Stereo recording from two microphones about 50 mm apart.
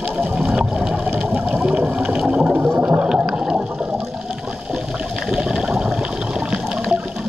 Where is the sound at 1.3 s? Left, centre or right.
Right.